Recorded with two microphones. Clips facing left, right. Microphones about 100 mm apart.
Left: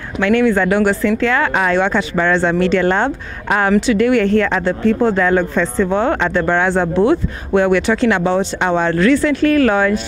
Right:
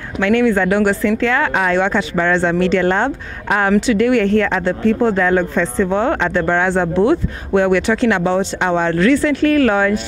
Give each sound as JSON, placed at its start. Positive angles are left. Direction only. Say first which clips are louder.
{"t": 0.2, "sound": "speech", "louder": "left 1 dB", "side_deg": 25}